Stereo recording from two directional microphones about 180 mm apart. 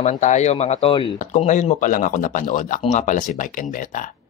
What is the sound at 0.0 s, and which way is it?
Speech, 40° left (ahead or behind).